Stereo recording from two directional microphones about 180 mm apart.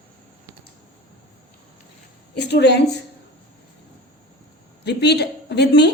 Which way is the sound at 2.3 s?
70° left (ahead or behind).